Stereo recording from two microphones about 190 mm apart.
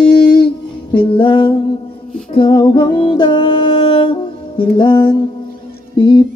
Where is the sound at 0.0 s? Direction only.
25° left (ahead or behind).